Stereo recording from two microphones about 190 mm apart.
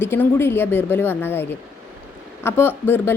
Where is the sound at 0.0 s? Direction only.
10° left (ahead or behind).